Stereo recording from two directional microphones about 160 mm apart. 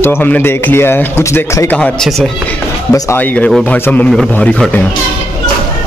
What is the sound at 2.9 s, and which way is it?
Speech, 20° left (ahead or behind).